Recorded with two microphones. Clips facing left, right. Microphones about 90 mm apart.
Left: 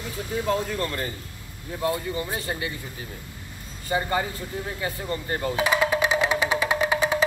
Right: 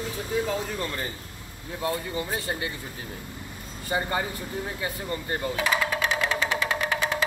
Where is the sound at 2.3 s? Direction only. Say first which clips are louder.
Even; 20° right (ahead or behind).